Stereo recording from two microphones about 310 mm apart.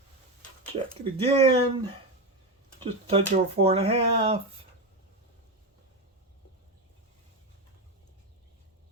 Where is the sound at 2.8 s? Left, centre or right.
Centre.